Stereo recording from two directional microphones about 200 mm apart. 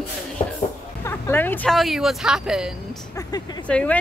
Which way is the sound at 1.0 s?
10° left (ahead or behind).